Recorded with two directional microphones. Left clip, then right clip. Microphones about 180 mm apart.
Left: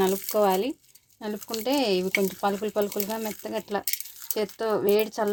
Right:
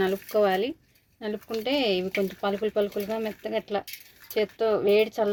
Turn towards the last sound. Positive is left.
turn(degrees=40)  # may be behind; listen again after turning